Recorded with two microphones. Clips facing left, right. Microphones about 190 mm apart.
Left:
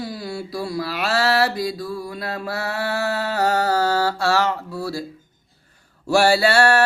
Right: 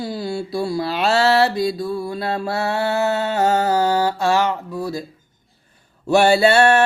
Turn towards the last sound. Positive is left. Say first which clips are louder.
# right 3 dB
turn(degrees=-20)  # may be behind; listen again after turning